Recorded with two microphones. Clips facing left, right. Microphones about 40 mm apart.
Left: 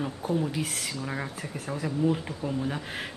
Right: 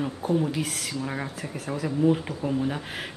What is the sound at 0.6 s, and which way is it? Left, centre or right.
Speech, centre.